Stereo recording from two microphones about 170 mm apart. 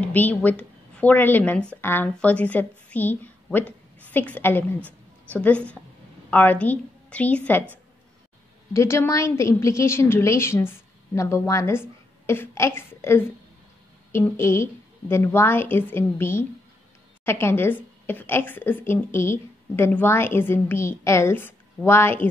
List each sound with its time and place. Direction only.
0.0 s a woman's voice: 10° left (ahead or behind)
4.7 s a sound: 10° right (ahead or behind)
5.3 s a woman's voice: 10° left (ahead or behind)
8.7 s a woman's voice: 15° left (ahead or behind)